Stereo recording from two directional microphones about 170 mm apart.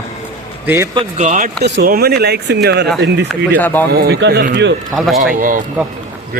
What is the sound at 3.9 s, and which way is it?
Speech, 70° right (ahead or behind).